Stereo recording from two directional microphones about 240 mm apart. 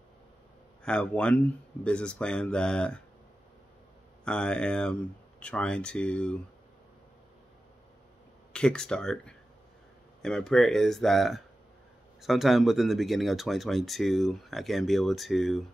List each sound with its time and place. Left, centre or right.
0.8 s speech: centre
4.2 s speech: centre
8.5 s speech: centre